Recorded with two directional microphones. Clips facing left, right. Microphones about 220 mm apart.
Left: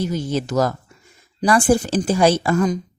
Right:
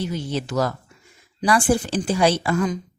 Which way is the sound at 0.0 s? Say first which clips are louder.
Left 4 dB; 45° left (ahead or behind).